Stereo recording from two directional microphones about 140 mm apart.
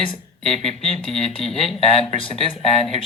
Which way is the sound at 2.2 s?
40° left (ahead or behind).